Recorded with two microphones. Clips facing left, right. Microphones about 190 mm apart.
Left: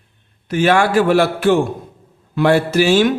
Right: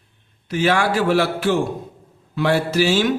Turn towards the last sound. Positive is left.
turn(degrees=50)  # may be behind; listen again after turning